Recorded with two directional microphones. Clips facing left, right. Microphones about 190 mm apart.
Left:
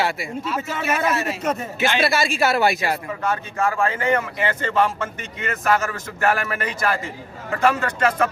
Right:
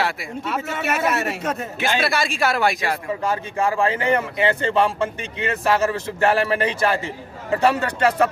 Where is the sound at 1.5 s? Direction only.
Centre (ahead or behind).